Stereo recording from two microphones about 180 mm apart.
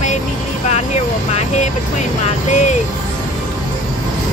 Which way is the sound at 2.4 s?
40° left (ahead or behind).